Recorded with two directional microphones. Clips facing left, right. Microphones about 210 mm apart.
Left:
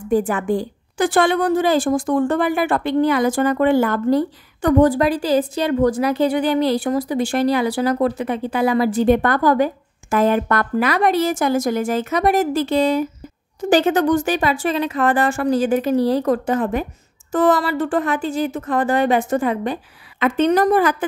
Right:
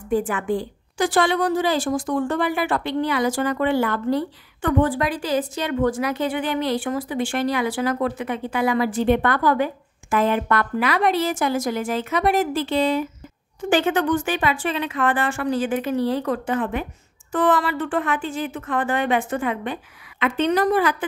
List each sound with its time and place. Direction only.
0.3 s a woman's voice: 40° left (ahead or behind)